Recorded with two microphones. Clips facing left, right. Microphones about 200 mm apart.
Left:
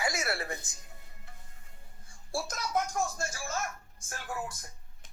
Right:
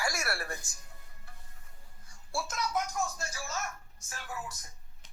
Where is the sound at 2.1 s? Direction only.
35° left (ahead or behind).